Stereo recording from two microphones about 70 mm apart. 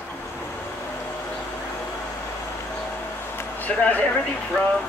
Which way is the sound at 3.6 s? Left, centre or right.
Left.